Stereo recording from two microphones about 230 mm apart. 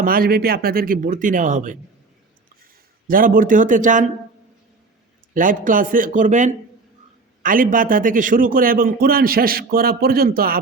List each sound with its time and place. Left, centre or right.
0.0 s a man's voice: right
3.1 s a man's voice: right
5.3 s a man's voice: right